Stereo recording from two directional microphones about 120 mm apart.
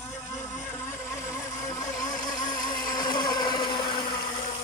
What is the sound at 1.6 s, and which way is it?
Motorboat, 30° left (ahead or behind).